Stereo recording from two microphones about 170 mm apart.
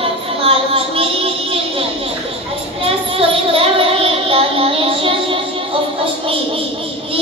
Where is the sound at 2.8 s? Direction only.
35° right (ahead or behind).